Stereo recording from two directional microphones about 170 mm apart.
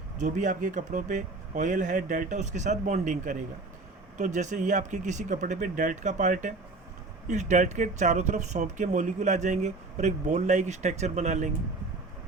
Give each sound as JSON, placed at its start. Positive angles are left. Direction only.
{"t": 0.2, "sound": "speech", "side_deg": -45}